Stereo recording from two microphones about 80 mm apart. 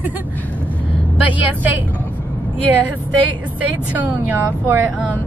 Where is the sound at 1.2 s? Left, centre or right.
Centre.